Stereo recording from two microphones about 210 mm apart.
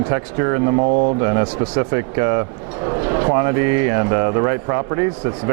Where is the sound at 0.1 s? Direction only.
20° right (ahead or behind).